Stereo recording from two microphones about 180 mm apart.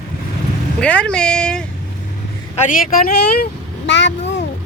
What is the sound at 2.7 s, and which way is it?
Speech, 50° left (ahead or behind).